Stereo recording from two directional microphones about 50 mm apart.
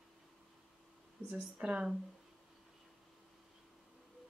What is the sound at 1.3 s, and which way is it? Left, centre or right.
Speech, right.